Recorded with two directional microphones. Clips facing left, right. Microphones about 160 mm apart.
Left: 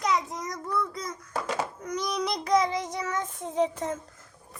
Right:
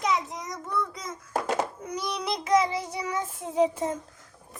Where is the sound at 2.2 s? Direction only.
5° right (ahead or behind).